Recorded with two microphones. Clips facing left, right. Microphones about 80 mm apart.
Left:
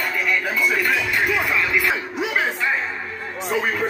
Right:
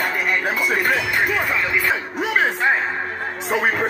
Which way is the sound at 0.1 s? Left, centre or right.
Right.